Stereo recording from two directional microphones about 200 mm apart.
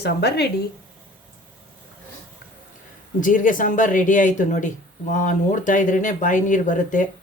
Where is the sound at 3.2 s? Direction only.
40° left (ahead or behind).